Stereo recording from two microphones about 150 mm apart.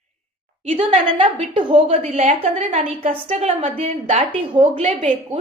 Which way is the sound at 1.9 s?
45° right (ahead or behind).